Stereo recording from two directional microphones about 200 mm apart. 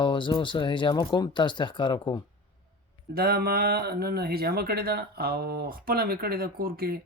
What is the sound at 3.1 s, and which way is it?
Speech, 50° right (ahead or behind).